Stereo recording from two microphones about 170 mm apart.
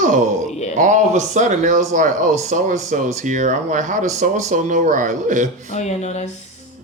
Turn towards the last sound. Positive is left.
turn(degrees=40)  # may be behind; listen again after turning